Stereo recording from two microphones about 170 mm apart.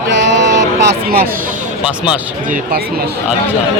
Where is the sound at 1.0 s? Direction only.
60° right (ahead or behind).